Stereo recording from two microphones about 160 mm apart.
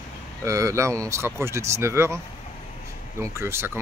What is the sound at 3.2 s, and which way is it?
Speech, 15° right (ahead or behind).